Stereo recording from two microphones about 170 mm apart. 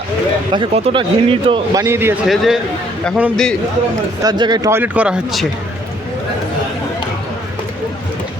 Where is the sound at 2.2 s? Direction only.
Centre (ahead or behind).